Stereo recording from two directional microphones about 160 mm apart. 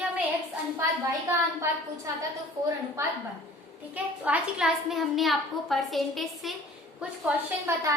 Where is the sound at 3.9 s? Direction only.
5° right (ahead or behind).